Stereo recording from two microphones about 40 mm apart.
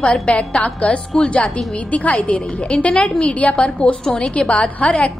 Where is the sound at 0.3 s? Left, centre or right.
Left.